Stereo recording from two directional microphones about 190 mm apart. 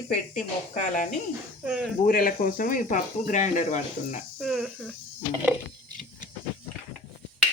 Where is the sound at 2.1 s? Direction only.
50° left (ahead or behind).